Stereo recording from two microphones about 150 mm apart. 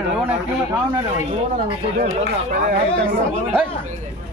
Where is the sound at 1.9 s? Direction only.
50° right (ahead or behind).